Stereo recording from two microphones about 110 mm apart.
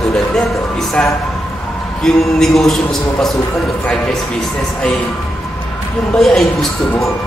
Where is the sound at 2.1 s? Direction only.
5° left (ahead or behind).